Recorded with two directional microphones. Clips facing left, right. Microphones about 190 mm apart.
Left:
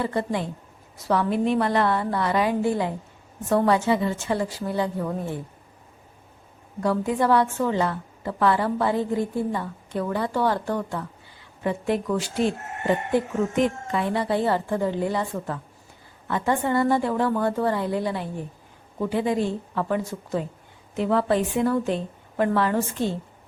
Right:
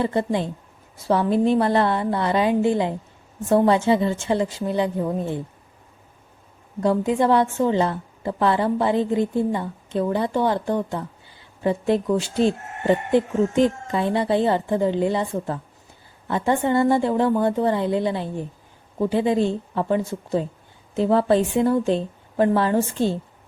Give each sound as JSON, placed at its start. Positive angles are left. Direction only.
{"t": 0.0, "sound": "a woman's voice", "side_deg": -25}
{"t": 6.8, "sound": "a woman's voice", "side_deg": -25}